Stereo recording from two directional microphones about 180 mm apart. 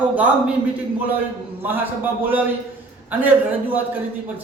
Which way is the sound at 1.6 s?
10° right (ahead or behind).